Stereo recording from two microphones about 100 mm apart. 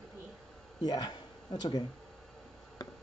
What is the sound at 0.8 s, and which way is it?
Speech, 40° left (ahead or behind).